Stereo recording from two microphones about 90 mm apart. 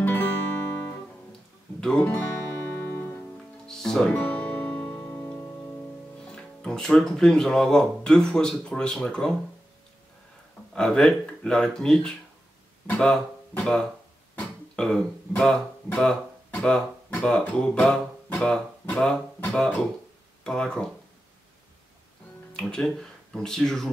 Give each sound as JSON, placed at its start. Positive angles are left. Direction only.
{"t": 0.0, "sound": "music", "side_deg": 25}
{"t": 1.8, "sound": "speech", "side_deg": 10}
{"t": 2.7, "sound": "music", "side_deg": 25}
{"t": 3.6, "sound": "music", "side_deg": 5}
{"t": 4.9, "sound": "music", "side_deg": 25}
{"t": 6.2, "sound": "speech", "side_deg": 10}
{"t": 10.7, "sound": "speech", "side_deg": 10}
{"t": 14.4, "sound": "speech", "side_deg": 5}
{"t": 22.5, "sound": "speech", "side_deg": 10}